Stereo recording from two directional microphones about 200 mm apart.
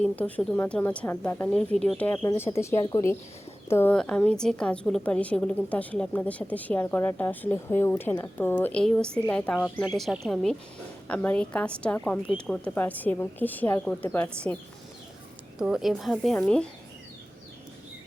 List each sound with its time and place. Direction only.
0.0 s a woman's voice: 5° left (ahead or behind)
15.5 s speech: 5° right (ahead or behind)